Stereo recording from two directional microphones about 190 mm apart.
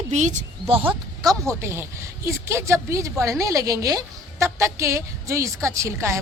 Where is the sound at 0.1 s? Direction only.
40° right (ahead or behind).